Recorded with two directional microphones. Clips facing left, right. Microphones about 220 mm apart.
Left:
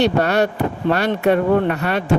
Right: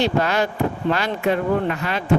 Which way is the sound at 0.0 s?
65° left (ahead or behind).